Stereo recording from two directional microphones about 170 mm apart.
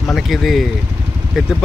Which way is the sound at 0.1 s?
Centre (ahead or behind).